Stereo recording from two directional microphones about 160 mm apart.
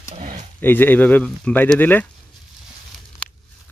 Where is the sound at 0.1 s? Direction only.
50° right (ahead or behind).